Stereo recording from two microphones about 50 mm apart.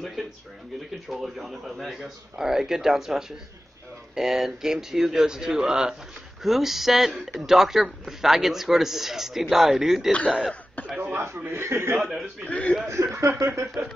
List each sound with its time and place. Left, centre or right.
0.2 s a man's voice: centre
11.1 s speech: right
12.0 s a man's voice: centre
12.4 s speech: left
12.8 s speech: right
13.8 s speech: right